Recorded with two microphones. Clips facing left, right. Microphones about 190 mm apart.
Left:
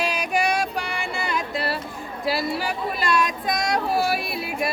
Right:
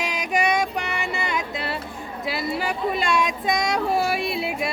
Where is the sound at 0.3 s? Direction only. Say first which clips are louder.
Right 2 dB; 20° right (ahead or behind).